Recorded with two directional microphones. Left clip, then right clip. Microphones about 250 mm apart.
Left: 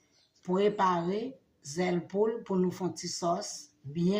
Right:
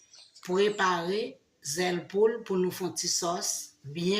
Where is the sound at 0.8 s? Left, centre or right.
Left.